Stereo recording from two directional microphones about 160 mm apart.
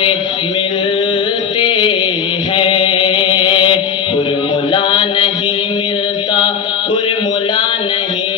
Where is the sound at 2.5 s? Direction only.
35° left (ahead or behind).